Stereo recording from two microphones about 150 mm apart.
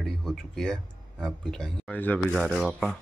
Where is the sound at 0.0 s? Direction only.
Centre (ahead or behind).